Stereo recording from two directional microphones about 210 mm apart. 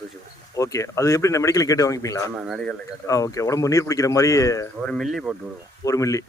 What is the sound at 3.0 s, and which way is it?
Speech, 15° left (ahead or behind).